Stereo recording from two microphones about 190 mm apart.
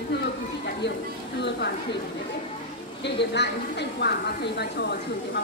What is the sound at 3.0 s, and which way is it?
A woman's voice, 65° left (ahead or behind).